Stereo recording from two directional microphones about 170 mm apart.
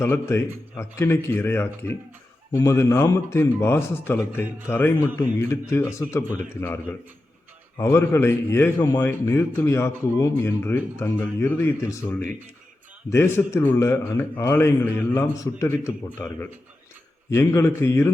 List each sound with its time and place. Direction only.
0.0 s speech: 15° left (ahead or behind)
7.8 s speech: 15° left (ahead or behind)